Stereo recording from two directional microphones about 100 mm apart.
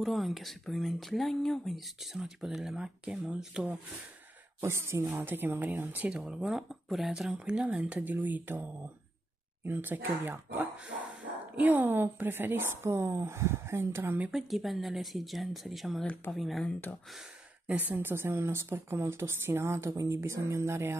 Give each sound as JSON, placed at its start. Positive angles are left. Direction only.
{"t": 0.0, "sound": "speech", "side_deg": 0}
{"t": 4.6, "sound": "speech", "side_deg": -25}
{"t": 14.3, "sound": "speech", "side_deg": 0}
{"t": 16.6, "sound": "speech", "side_deg": 15}
{"t": 17.6, "sound": "speech", "side_deg": -15}